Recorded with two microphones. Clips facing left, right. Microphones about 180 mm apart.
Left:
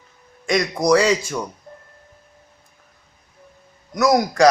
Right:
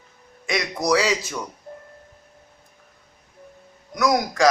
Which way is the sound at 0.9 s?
50° left (ahead or behind).